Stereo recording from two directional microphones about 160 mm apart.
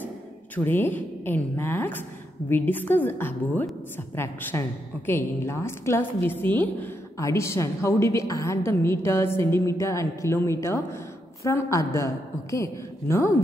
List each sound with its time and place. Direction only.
0.7 s a woman's voice: 10° left (ahead or behind)